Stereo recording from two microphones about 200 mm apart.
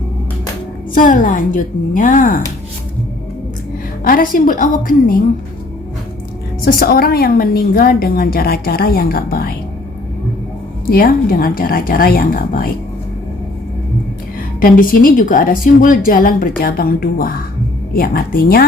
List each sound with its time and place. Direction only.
0.9 s a woman's voice: 40° left (ahead or behind)
4.0 s a woman's voice: 45° left (ahead or behind)
6.7 s a woman's voice: 50° left (ahead or behind)
10.8 s a woman's voice: 45° left (ahead or behind)
14.6 s a woman's voice: 45° left (ahead or behind)